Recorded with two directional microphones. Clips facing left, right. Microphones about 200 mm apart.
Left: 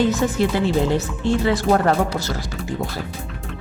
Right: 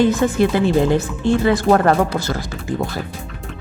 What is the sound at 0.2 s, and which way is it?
Speech, 65° right (ahead or behind).